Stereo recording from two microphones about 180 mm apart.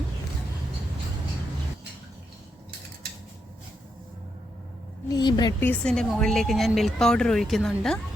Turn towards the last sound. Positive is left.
turn(degrees=0)  # may be behind; listen again after turning